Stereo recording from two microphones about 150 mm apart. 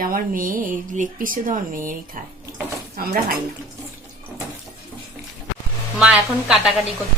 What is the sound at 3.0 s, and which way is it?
Speech, 85° right.